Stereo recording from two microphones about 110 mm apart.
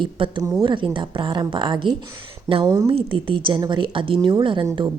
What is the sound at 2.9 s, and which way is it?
Speech, 50° right (ahead or behind).